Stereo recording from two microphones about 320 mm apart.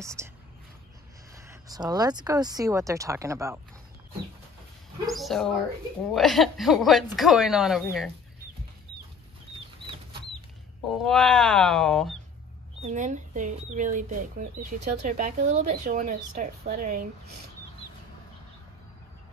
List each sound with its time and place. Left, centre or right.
0.0 s speech: centre
1.3 s speech: centre
5.0 s speech: centre
11.0 s speech: centre
12.8 s speech: right